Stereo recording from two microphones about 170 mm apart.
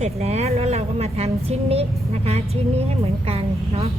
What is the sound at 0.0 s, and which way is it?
A woman's voice, 40° right (ahead or behind).